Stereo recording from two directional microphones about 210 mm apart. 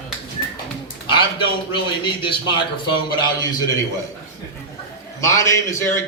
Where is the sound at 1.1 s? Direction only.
25° left (ahead or behind).